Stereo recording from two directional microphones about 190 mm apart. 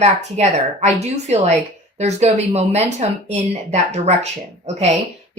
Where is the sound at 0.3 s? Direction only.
35° right (ahead or behind).